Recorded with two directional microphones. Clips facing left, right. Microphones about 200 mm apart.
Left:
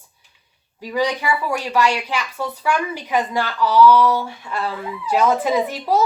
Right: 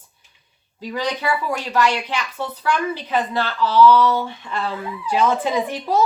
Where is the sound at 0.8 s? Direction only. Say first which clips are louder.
Left 3 dB; 10° left (ahead or behind).